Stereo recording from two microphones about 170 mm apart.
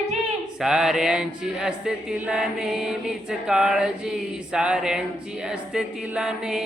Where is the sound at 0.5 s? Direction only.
5° right (ahead or behind).